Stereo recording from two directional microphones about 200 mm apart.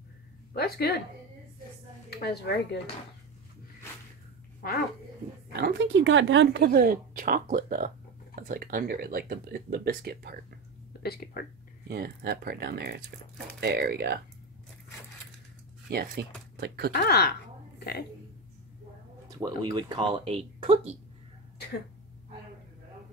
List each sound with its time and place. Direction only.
0.5 s speech: 50° left (ahead or behind)
2.0 s speech: 55° left (ahead or behind)
5.5 s speech: 50° right (ahead or behind)
10.9 s speech: 50° left (ahead or behind)
11.9 s speech: 50° right (ahead or behind)
15.9 s speech: 50° right (ahead or behind)
16.9 s speech: 50° left (ahead or behind)
17.7 s a sound: 50° left (ahead or behind)
19.2 s speech: 20° right (ahead or behind)